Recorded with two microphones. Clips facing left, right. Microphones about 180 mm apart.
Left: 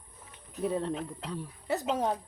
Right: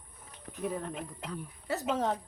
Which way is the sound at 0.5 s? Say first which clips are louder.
Left 5 dB; 30° left (ahead or behind).